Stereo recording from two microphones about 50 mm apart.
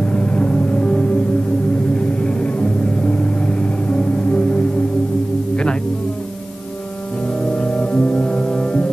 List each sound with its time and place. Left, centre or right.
0.0 s music: left
7.5 s music: left